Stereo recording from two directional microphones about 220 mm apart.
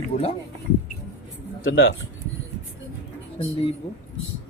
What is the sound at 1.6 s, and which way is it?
Speech, 60° left (ahead or behind).